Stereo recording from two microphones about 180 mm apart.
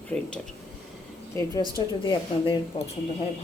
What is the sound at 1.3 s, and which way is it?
A woman's voice, 20° left (ahead or behind).